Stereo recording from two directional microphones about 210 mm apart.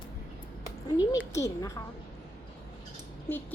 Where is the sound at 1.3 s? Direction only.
15° left (ahead or behind).